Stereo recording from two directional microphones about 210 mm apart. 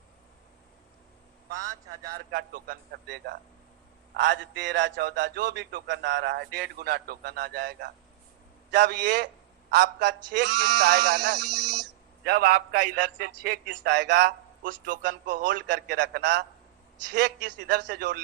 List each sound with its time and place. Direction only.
2.3 s a man's voice: 45° right (ahead or behind)